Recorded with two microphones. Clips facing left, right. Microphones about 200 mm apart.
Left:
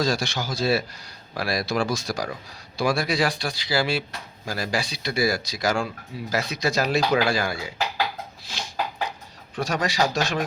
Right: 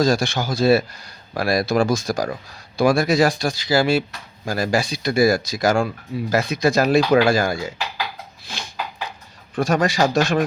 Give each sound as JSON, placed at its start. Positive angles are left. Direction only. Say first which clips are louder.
{"t": 0.0, "sound": "speech", "louder": "right 6 dB", "side_deg": -50}
{"t": 8.5, "sound": "a sound", "louder": "right 2 dB", "side_deg": -55}
{"t": 9.6, "sound": "speech", "louder": "right 6 dB", "side_deg": -50}